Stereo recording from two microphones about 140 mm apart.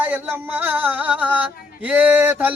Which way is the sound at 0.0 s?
15° right (ahead or behind).